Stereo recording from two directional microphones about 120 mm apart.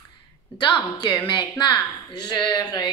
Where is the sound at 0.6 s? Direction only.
40° left (ahead or behind).